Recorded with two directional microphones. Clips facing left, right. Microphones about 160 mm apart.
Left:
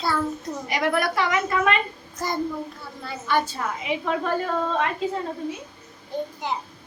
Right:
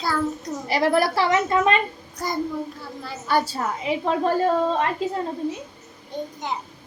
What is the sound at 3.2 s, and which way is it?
A woman's voice, 35° right (ahead or behind).